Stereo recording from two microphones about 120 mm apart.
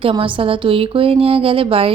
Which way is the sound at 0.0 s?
45° right (ahead or behind).